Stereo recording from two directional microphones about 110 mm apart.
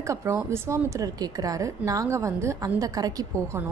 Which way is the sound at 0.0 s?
25° right (ahead or behind).